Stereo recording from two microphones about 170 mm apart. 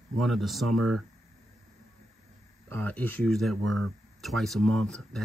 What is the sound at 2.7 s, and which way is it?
Speech, 10° left (ahead or behind).